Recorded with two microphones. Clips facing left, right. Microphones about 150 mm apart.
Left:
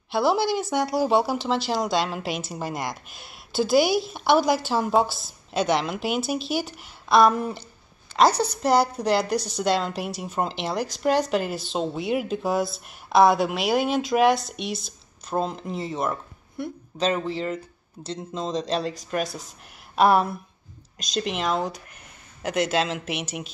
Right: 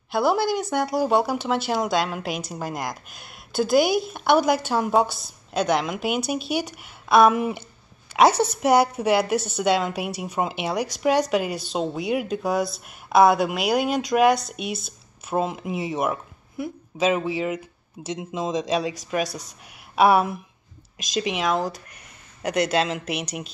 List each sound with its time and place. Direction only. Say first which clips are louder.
0.6 s a woman's voice: even; 5° left (ahead or behind)
3.8 s speech: right 1 dB; 50° right (ahead or behind)
4.1 s a woman's voice: right 1 dB; centre (ahead or behind)